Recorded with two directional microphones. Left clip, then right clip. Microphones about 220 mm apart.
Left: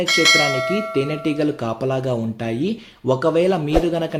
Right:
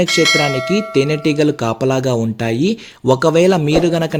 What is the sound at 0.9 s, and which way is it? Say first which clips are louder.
A man's voice: right 6 dB; 45° right (ahead or behind).